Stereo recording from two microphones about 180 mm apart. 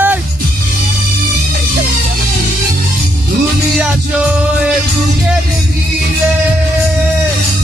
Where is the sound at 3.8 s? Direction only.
5° right (ahead or behind).